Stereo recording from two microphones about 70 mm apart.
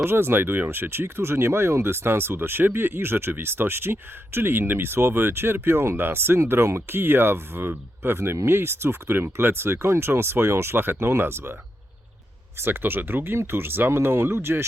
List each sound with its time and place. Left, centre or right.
0.0 s speech: right
12.5 s speech: right